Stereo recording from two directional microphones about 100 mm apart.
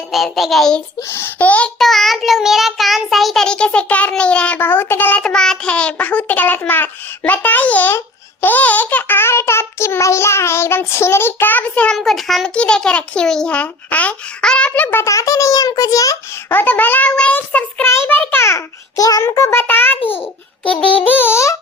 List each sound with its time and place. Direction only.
0.1 s child singing: centre (ahead or behind)
1.1 s a child's voice: 20° left (ahead or behind)
1.8 s child singing: centre (ahead or behind)
11.9 s child singing: centre (ahead or behind)
12.5 s a child's voice: 10° left (ahead or behind)
15.0 s a child's voice: 30° left (ahead or behind)
16.5 s a child's voice: 20° left (ahead or behind)
17.8 s child singing: 25° left (ahead or behind)
19.3 s child singing: 30° left (ahead or behind)
20.0 s a child's voice: 70° left (ahead or behind)
20.7 s child singing: 15° left (ahead or behind)